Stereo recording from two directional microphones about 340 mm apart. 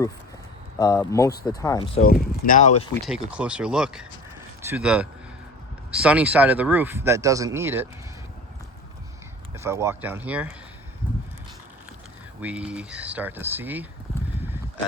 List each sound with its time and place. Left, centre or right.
0.8 s speech: centre
2.5 s speech: left
3.1 s speech: centre
9.6 s speech: centre
12.4 s speech: centre